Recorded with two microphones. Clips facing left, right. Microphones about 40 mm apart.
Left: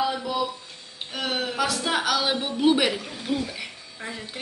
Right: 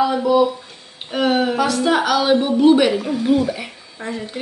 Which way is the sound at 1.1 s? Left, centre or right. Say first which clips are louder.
Right 11 dB; centre.